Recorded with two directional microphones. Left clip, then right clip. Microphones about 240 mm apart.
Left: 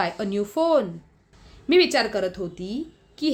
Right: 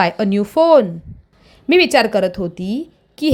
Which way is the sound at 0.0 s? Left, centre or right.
Right.